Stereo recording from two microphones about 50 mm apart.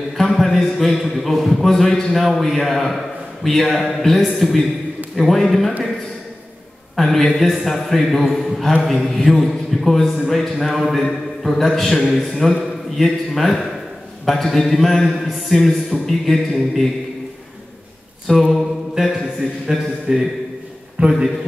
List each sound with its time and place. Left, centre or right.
0.2 s a man's voice: centre
7.0 s a man's voice: centre
18.4 s a man's voice: centre
21.0 s a man's voice: right